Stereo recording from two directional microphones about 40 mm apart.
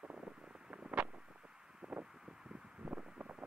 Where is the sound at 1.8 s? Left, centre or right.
Centre.